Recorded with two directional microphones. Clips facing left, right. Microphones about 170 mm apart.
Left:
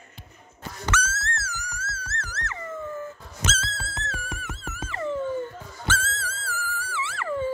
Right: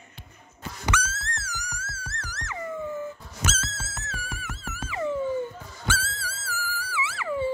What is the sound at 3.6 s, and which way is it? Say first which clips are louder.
Music: left 3 dB; 5° right (ahead or behind).